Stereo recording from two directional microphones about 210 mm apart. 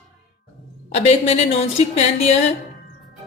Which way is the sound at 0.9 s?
30° left (ahead or behind).